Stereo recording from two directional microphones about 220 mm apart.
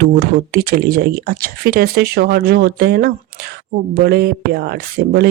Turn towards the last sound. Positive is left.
turn(degrees=-45)  # may be behind; listen again after turning